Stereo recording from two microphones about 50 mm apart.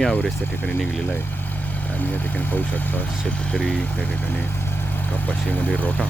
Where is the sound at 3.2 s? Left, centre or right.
Left.